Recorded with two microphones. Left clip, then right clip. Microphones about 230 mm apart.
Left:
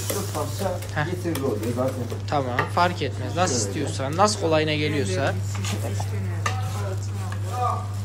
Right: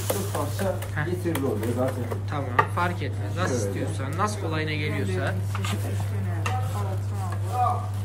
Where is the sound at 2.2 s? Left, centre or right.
Centre.